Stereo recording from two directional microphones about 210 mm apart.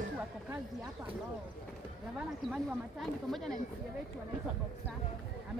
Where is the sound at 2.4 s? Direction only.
Centre (ahead or behind).